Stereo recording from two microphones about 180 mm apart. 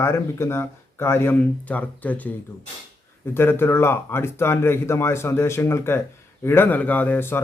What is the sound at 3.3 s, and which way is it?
A man's voice, 15° left (ahead or behind).